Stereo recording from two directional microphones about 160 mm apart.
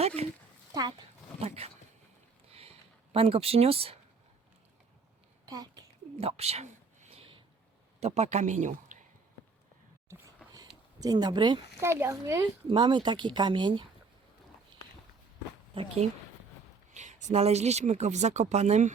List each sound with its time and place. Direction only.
0.2 s speech: 40° right (ahead or behind)
0.7 s speech: 25° right (ahead or behind)
1.4 s speech: 40° right (ahead or behind)
2.5 s a sound: 40° right (ahead or behind)
6.1 s a sound: 40° right (ahead or behind)
8.0 s speech: 45° right (ahead or behind)
10.1 s a sound: 20° right (ahead or behind)
11.0 s speech: 25° right (ahead or behind)
11.8 s speech: 15° right (ahead or behind)
12.6 s speech: 30° right (ahead or behind)
15.7 s speech: 35° right (ahead or behind)
16.9 s speech: 50° right (ahead or behind)